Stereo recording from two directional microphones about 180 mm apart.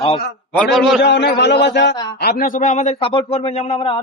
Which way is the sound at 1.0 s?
70° left (ahead or behind).